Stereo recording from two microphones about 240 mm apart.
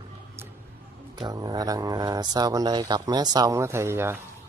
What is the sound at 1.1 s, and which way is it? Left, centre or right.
Speech, centre.